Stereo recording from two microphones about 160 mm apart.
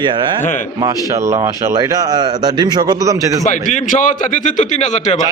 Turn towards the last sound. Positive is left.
turn(degrees=50)  # may be behind; listen again after turning